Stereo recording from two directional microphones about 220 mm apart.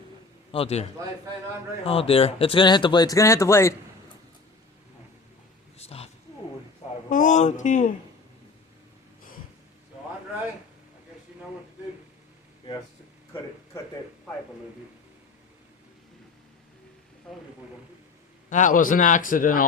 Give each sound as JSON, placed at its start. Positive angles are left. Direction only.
{"t": 0.5, "sound": "speech", "side_deg": 25}
{"t": 5.7, "sound": "a sound", "side_deg": 30}
{"t": 7.1, "sound": "a man's voice", "side_deg": 35}
{"t": 18.4, "sound": "a man's voice", "side_deg": 35}